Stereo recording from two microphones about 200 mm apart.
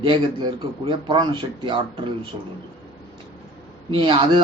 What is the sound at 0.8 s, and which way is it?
Speech, 25° right (ahead or behind).